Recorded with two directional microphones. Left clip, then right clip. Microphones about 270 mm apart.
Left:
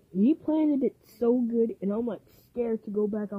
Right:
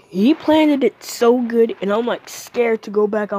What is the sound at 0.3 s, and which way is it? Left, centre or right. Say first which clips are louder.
Speech: right 12 dB; centre.